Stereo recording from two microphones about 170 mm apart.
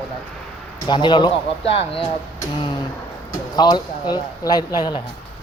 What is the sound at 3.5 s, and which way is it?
A man's voice, 25° left (ahead or behind).